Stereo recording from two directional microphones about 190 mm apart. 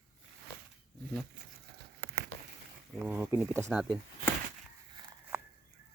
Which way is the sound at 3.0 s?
5° right (ahead or behind).